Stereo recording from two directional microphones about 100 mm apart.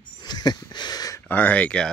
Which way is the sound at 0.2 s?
45° left (ahead or behind).